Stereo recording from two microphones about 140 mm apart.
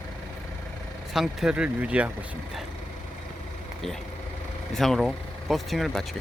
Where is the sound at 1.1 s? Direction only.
5° right (ahead or behind).